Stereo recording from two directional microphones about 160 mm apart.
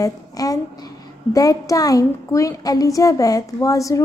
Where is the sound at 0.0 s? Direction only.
20° left (ahead or behind).